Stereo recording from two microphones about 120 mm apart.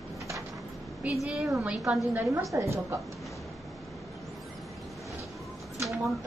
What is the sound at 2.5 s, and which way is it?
Speech, 25° right (ahead or behind).